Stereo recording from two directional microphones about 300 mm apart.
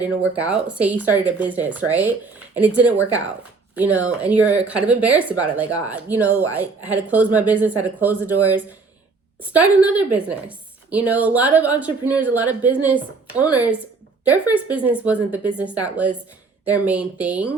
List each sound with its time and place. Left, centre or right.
0.3 s speech: centre